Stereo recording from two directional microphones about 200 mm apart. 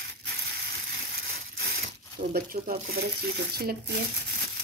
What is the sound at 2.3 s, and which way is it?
Speech, 45° right (ahead or behind).